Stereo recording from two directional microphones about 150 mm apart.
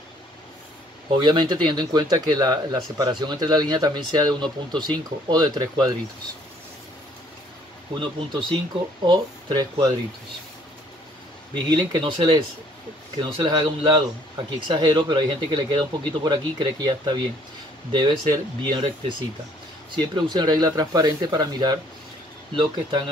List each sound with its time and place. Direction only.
1.1 s speech: 30° right (ahead or behind)
7.9 s speech: 30° right (ahead or behind)
11.5 s speech: 30° right (ahead or behind)
20.2 s speech: 25° right (ahead or behind)